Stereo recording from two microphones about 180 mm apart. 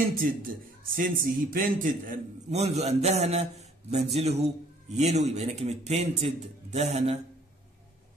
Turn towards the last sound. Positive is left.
turn(degrees=-35)  # may be behind; listen again after turning